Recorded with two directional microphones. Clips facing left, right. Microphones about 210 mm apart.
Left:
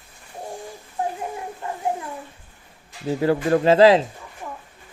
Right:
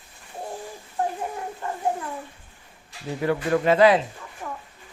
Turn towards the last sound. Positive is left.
turn(degrees=15)  # may be behind; listen again after turning